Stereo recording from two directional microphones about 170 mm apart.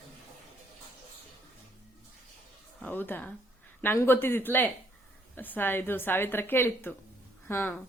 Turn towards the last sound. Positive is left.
turn(degrees=15)  # may be behind; listen again after turning